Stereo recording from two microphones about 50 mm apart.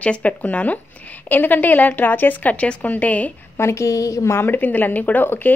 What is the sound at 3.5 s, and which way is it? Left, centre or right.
Speech, left.